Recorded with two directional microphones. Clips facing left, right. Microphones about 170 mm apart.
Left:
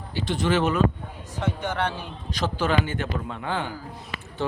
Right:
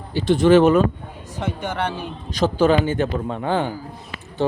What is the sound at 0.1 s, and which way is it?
Speech, 50° right (ahead or behind).